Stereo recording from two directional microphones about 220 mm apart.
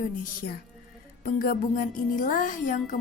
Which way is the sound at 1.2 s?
40° left (ahead or behind).